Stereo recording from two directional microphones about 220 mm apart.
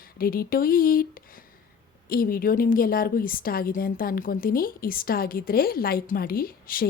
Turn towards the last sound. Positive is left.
turn(degrees=40)  # may be behind; listen again after turning